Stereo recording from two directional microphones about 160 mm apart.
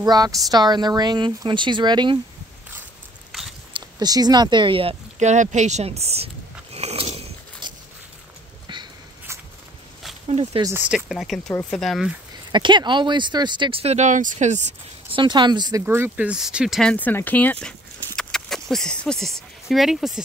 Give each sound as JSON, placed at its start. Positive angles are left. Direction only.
{"t": 0.0, "sound": "a woman's voice", "side_deg": -25}
{"t": 3.3, "sound": "biting", "side_deg": 0}
{"t": 3.7, "sound": "speech", "side_deg": -25}
{"t": 7.6, "sound": "a sound", "side_deg": -30}
{"t": 10.2, "sound": "a sound", "side_deg": -40}
{"t": 10.8, "sound": "speech", "side_deg": -5}
{"t": 12.5, "sound": "a woman's voice", "side_deg": -30}
{"t": 15.1, "sound": "a woman's voice", "side_deg": -30}
{"t": 15.8, "sound": "speech", "side_deg": -15}
{"t": 16.9, "sound": "speech", "side_deg": 10}